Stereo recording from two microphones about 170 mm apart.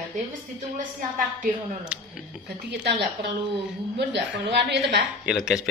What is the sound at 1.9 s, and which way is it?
Speech, 5° right (ahead or behind).